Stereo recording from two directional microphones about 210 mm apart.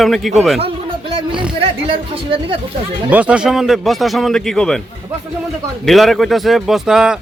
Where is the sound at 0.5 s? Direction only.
25° right (ahead or behind).